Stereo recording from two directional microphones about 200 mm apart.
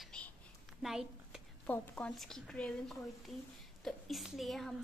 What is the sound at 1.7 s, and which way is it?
A woman's voice, 5° left (ahead or behind).